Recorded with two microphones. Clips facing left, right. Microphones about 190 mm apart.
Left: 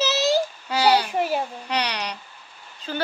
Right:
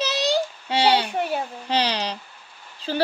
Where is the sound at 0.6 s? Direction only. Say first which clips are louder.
Even; 25° right (ahead or behind).